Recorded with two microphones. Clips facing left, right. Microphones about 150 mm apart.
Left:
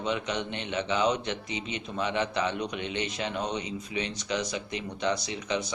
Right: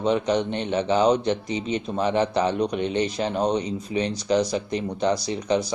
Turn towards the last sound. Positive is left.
turn(degrees=-35)  # may be behind; listen again after turning